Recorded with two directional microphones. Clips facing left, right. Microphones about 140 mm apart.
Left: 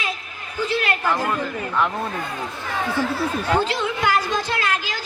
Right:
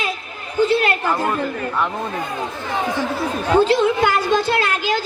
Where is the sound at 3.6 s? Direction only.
25° right (ahead or behind).